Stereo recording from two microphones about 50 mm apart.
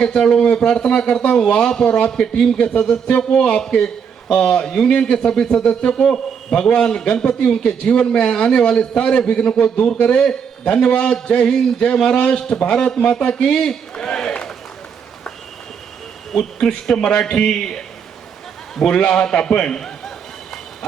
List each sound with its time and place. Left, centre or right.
0.0 s a man's voice: centre
16.3 s speech: centre
18.9 s a man's voice: left